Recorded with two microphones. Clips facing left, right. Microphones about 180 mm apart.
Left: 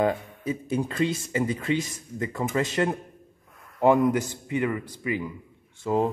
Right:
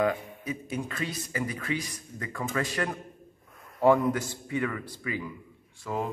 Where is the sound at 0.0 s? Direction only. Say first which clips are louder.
Left 3 dB; 30° left (ahead or behind).